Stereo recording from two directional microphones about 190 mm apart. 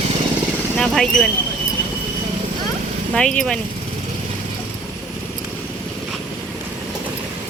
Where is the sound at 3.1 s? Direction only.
5° left (ahead or behind).